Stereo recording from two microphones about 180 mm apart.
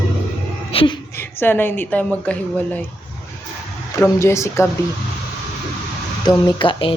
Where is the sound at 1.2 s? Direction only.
10° left (ahead or behind).